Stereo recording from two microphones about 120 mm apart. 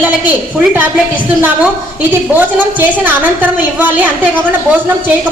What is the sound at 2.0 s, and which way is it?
A woman's voice, 15° right (ahead or behind).